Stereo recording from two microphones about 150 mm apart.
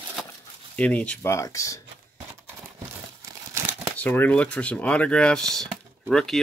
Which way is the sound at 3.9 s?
10° left (ahead or behind).